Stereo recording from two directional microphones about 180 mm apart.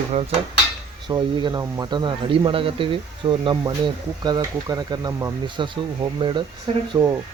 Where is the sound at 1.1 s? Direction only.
25° right (ahead or behind).